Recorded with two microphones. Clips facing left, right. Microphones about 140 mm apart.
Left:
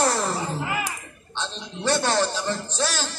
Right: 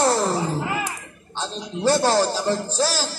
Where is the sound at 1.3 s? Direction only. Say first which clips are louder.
Right 4 dB; 40° right (ahead or behind).